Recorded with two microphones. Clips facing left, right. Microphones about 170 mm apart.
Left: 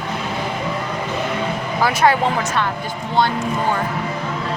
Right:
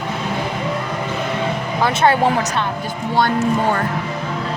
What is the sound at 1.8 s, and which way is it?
Speech, 25° right (ahead or behind).